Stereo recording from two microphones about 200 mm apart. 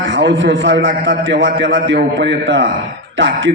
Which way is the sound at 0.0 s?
65° right (ahead or behind).